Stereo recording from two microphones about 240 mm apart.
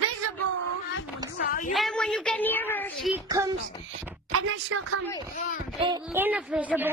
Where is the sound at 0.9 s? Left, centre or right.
Left.